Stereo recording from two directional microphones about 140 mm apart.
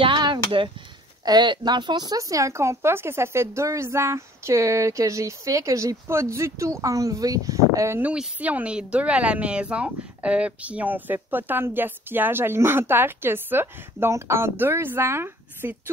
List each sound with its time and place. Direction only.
0.0 s a sound: 35° right (ahead or behind)
1.2 s speech: 30° right (ahead or behind)
8.1 s speech: 10° right (ahead or behind)